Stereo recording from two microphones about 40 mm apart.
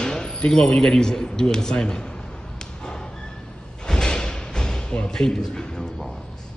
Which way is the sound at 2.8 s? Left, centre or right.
Centre.